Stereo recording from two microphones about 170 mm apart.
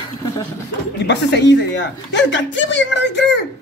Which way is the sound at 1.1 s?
90° left.